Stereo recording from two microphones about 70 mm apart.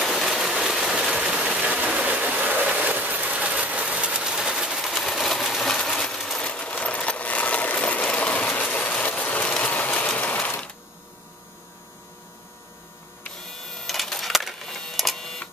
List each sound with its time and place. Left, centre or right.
0.0 s engine: centre
1.7 s vehicle: right
4.8 s a sound: centre
5.7 s sewing machine: centre
6.4 s coin: centre
9.5 s a sound: centre
13.4 s printer: centre